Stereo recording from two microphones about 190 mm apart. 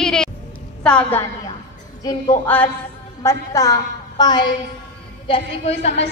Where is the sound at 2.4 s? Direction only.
10° left (ahead or behind); by 6.0 s 35° left (ahead or behind).